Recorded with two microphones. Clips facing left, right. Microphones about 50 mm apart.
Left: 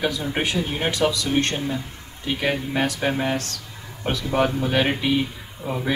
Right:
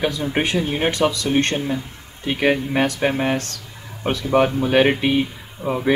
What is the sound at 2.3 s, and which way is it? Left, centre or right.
Speech, right.